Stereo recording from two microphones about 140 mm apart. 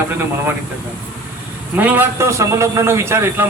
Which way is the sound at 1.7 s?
15° right (ahead or behind).